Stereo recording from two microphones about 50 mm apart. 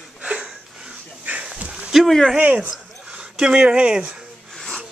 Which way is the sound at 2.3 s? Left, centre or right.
Right.